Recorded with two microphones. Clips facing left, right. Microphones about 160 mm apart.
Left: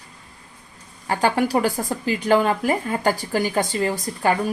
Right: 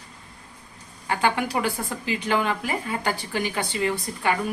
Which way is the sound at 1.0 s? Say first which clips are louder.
Left 4 dB; 40° left (ahead or behind).